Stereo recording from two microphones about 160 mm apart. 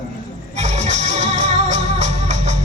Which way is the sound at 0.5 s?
45° right (ahead or behind).